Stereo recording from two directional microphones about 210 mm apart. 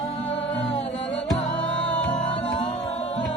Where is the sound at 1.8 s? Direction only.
5° left (ahead or behind).